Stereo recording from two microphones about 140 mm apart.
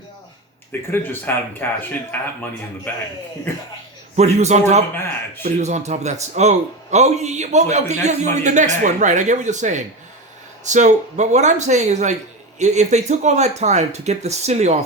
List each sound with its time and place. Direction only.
0.7 s speech: 15° left (ahead or behind)
4.1 s a man's voice: 55° right (ahead or behind)